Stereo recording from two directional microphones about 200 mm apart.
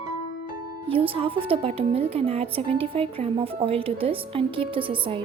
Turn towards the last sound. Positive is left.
turn(degrees=-25)  # may be behind; listen again after turning